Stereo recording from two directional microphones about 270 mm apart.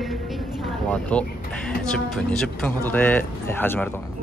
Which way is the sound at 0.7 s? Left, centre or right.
Centre.